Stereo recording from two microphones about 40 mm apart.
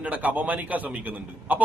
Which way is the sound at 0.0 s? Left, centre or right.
Right.